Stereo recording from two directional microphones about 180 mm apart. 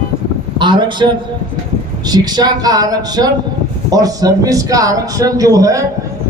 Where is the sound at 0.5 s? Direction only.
25° right (ahead or behind).